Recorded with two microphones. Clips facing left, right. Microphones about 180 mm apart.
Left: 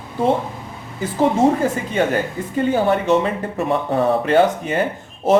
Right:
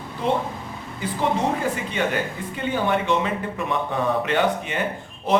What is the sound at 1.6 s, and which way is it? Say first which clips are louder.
Speech: left 5 dB; 45° left (ahead or behind).